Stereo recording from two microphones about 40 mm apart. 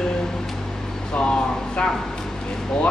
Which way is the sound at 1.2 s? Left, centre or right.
Left.